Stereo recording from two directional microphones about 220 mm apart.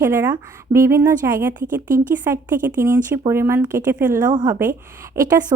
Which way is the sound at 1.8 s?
40° right (ahead or behind).